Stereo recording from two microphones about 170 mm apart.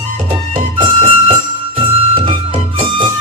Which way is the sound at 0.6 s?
30° right (ahead or behind).